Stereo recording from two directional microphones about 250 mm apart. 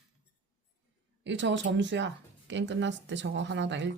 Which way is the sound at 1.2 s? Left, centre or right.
Right.